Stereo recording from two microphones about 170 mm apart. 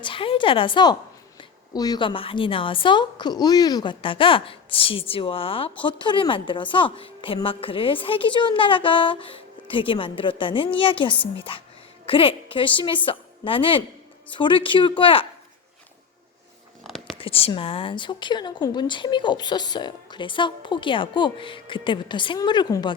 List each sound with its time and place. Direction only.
0.0 s a woman's voice: 30° left (ahead or behind)
16.8 s a sound: centre (ahead or behind)
17.2 s speech: 35° left (ahead or behind)